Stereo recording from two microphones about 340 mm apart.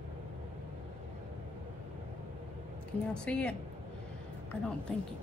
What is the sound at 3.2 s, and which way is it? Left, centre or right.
Speech, centre.